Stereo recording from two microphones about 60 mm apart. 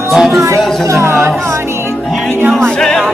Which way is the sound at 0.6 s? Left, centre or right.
Centre.